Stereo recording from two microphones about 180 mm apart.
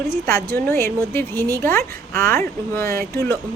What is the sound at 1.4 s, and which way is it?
Speech, 15° right (ahead or behind).